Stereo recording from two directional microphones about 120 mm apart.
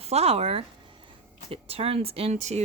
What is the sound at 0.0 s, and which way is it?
Speech, 60° right (ahead or behind).